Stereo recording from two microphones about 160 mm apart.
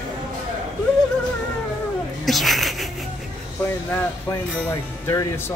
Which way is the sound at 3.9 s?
15° left (ahead or behind).